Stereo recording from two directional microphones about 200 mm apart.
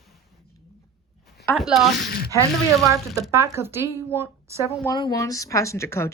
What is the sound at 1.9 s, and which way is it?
Speech, 50° left (ahead or behind).